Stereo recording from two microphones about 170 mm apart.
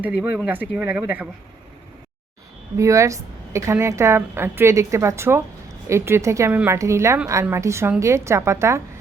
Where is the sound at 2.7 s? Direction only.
15° right (ahead or behind).